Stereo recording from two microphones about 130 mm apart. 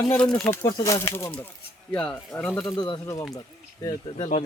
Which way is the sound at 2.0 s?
5° left (ahead or behind).